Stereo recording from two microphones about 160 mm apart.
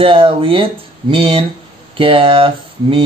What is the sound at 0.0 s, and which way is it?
Speech, 35° right (ahead or behind).